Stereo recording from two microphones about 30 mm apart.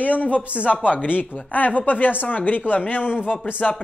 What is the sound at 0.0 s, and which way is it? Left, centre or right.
Speech, left.